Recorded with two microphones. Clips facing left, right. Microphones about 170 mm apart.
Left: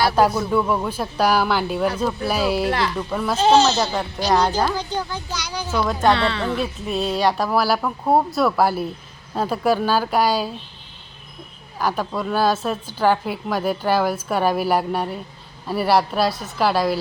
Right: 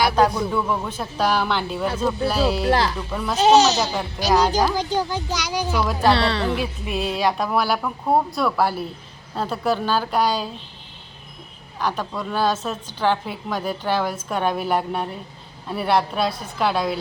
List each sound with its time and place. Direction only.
0.2 s a woman's voice: 5° left (ahead or behind)
2.6 s speech: 35° right (ahead or behind)
3.1 s a woman's voice: 10° left (ahead or behind)
3.3 s speech: 15° right (ahead or behind)
6.1 s speech: 35° right (ahead or behind)
6.9 s a woman's voice: 5° right (ahead or behind)
11.8 s a woman's voice: 10° left (ahead or behind)